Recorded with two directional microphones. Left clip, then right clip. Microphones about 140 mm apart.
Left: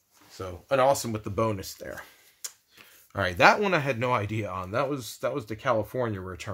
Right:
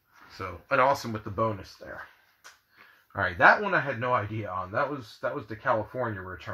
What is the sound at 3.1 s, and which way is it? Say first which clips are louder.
Speech: even; 30° left (ahead or behind).